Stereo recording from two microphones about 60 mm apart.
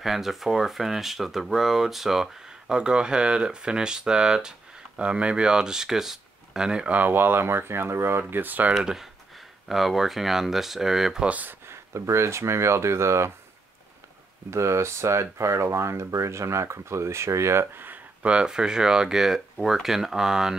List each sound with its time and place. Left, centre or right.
0.0 s speech: centre
6.9 s speech: right
8.7 s speech: centre
11.2 s speech: right
11.6 s speech: right
14.5 s speech: right
17.7 s a sound: right
18.2 s speech: centre